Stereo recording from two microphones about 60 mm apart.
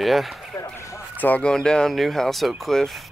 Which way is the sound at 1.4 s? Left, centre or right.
Centre.